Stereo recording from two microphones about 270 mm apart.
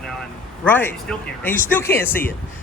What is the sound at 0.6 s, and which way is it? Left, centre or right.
Speech, centre.